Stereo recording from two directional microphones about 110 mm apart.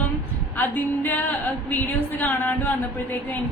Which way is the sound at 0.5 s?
15° left (ahead or behind).